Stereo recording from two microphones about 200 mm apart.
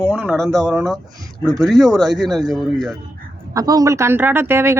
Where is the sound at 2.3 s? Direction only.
Centre (ahead or behind).